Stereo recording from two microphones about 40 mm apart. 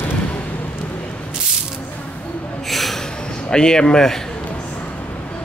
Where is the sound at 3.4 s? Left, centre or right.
Centre.